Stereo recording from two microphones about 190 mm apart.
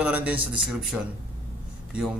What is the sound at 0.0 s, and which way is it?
Speech, 10° right (ahead or behind).